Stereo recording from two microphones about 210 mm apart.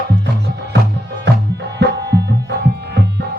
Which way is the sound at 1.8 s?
55° right (ahead or behind).